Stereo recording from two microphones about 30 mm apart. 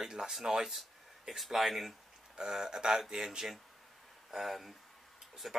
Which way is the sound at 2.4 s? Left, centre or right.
Centre.